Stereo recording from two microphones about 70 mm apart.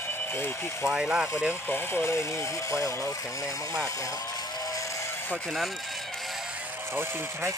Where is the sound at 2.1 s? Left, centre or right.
Left.